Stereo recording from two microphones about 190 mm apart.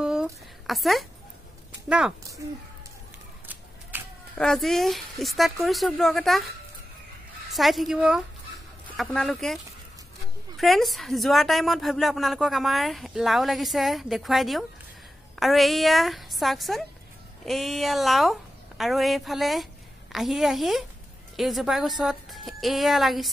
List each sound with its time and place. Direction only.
0.0 s a sound: 5° right (ahead or behind)
1.9 s a woman's voice: 5° right (ahead or behind)
4.4 s a woman's voice: centre (ahead or behind)
7.5 s a woman's voice: centre (ahead or behind)
10.6 s a woman's voice: centre (ahead or behind)